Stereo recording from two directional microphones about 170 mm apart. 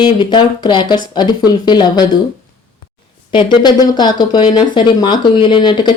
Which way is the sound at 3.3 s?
25° left (ahead or behind).